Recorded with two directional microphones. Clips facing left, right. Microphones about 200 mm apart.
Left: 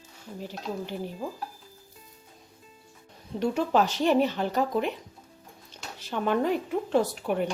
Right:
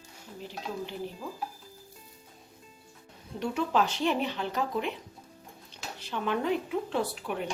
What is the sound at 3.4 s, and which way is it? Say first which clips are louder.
Speech: left 4 dB; 40° left (ahead or behind).